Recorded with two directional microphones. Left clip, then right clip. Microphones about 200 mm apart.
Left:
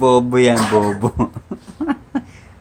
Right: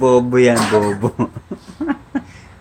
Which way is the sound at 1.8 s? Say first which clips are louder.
Even; 10° left (ahead or behind).